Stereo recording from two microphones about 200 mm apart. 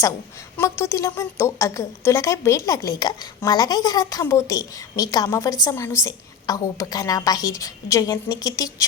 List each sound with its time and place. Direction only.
0.5 s a woman's voice: 15° left (ahead or behind)